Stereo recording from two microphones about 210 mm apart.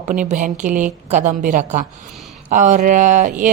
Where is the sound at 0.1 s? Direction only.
35° right (ahead or behind).